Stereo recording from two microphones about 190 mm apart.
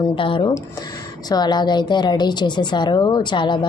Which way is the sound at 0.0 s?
25° left (ahead or behind).